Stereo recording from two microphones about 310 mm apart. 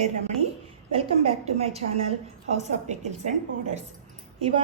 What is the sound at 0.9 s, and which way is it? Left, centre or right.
A woman's voice, centre.